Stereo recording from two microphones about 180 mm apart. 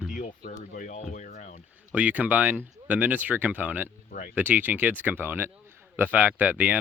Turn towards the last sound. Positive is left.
turn(degrees=-10)  # may be behind; listen again after turning